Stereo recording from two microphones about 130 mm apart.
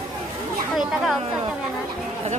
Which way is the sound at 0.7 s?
Centre (ahead or behind).